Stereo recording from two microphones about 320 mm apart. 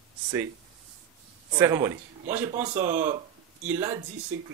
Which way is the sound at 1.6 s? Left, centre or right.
Centre.